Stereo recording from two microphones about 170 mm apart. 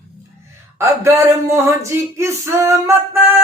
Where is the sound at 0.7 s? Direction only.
15° right (ahead or behind).